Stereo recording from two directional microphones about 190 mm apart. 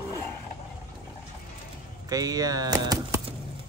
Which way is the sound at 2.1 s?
20° right (ahead or behind).